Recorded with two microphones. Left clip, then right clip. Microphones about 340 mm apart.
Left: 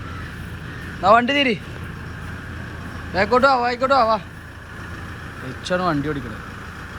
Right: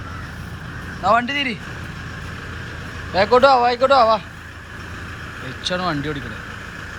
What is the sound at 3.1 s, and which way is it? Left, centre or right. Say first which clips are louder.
Speech: right 3 dB; centre.